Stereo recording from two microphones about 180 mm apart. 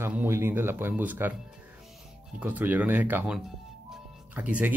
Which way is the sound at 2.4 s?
10° right (ahead or behind).